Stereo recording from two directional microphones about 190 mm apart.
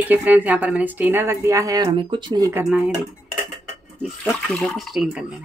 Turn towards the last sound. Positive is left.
turn(degrees=0)  # may be behind; listen again after turning